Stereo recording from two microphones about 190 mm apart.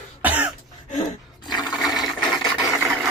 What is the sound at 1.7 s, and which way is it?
Toilet flush, 5° right (ahead or behind).